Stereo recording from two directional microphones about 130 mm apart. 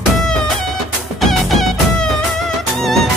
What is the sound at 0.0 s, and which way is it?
Music, centre (ahead or behind).